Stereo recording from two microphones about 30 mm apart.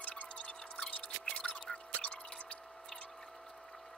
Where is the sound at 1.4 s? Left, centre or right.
Centre.